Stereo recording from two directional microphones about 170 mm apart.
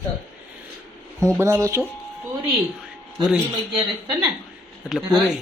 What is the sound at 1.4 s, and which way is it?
Speech, 15° right (ahead or behind).